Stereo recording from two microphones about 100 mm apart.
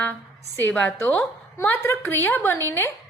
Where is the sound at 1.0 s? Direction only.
25° left (ahead or behind).